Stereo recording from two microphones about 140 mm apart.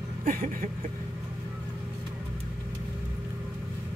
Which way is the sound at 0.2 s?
75° right (ahead or behind).